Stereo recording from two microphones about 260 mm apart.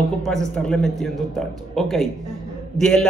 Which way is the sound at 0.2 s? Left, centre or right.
Centre.